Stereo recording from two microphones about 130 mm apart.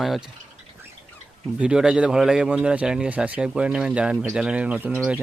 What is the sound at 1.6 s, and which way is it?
A man's voice, 5° right (ahead or behind).